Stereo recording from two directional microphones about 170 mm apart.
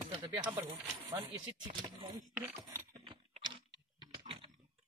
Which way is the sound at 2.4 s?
15° right (ahead or behind).